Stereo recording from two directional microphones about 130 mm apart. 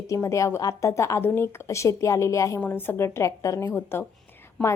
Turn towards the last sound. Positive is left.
turn(degrees=5)  # may be behind; listen again after turning